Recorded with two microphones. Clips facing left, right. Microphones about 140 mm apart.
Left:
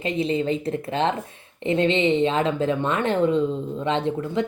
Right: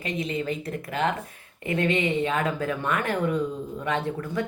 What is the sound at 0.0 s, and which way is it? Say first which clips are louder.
A woman's voice: left 6 dB; 30° left (ahead or behind).